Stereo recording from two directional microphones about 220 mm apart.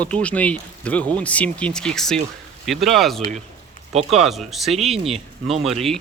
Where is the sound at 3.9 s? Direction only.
30° right (ahead or behind).